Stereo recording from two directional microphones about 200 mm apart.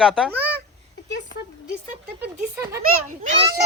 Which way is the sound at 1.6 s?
5° right (ahead or behind).